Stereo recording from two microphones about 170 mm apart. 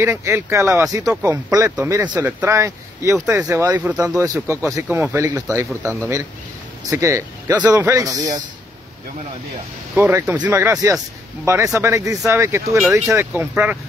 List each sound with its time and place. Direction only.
0.0 s speech: 15° right (ahead or behind)
9.9 s speech: 10° right (ahead or behind)